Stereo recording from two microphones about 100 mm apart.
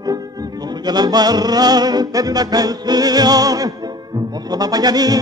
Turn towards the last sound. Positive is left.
turn(degrees=-40)  # may be behind; listen again after turning